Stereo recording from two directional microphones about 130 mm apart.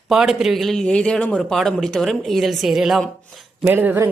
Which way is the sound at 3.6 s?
15° right (ahead or behind).